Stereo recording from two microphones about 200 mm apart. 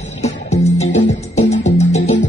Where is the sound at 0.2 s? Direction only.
35° left (ahead or behind).